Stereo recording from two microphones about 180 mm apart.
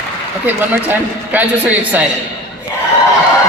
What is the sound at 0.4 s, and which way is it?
A man's voice, 10° right (ahead or behind).